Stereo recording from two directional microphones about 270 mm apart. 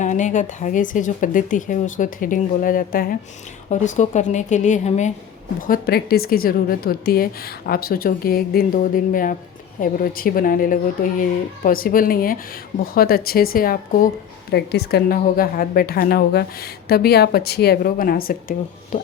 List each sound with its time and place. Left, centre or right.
0.0 s a woman's voice: left